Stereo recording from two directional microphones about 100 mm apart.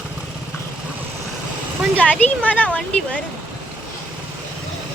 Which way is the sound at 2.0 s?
15° left (ahead or behind).